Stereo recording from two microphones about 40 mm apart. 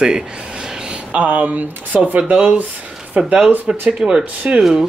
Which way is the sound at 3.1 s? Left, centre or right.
Right.